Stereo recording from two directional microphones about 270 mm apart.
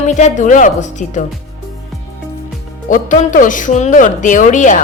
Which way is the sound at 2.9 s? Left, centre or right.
Left.